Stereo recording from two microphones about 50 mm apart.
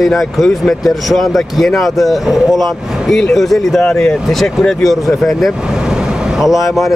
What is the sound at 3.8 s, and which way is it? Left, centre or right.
Speech, centre.